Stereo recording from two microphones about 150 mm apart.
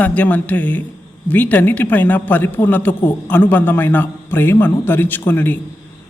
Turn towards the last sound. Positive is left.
turn(degrees=15)  # may be behind; listen again after turning